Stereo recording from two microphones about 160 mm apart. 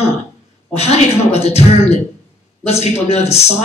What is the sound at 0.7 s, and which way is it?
A man's voice, 40° left (ahead or behind).